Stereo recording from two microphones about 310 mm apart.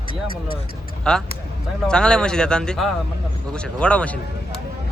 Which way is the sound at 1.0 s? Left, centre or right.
Centre.